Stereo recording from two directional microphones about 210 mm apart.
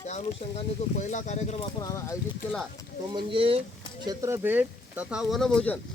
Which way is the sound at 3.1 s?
25° right (ahead or behind).